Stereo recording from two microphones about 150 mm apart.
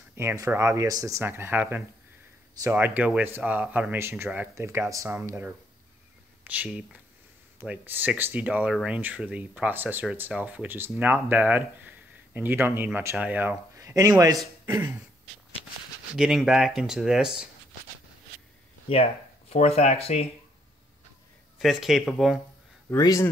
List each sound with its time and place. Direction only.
0.1 s speech: 15° right (ahead or behind)
13.7 s a man's voice: 20° right (ahead or behind)
14.7 s a sound: 30° right (ahead or behind)
16.2 s speech: 5° right (ahead or behind)
19.5 s speech: 45° left (ahead or behind)
21.5 s speech: centre (ahead or behind)
22.8 s speech: 20° left (ahead or behind)